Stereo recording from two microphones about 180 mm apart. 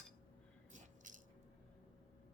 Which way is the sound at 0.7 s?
45° right (ahead or behind).